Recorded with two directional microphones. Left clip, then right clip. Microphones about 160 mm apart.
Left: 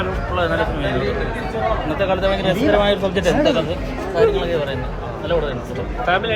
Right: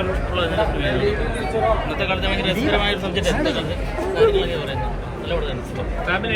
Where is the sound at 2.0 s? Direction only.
30° left (ahead or behind).